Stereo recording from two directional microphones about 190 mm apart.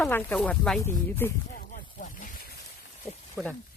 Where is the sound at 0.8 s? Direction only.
10° left (ahead or behind).